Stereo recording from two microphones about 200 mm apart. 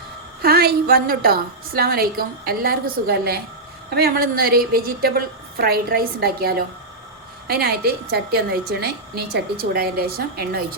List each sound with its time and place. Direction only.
0.4 s a woman's voice: 50° right (ahead or behind)